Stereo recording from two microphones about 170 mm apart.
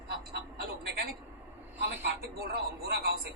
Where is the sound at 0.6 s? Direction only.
65° right (ahead or behind).